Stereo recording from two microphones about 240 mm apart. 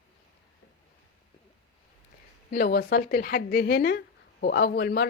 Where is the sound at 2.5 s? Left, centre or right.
Left.